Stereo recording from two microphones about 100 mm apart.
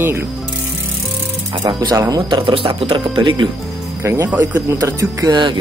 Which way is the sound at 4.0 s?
25° right (ahead or behind).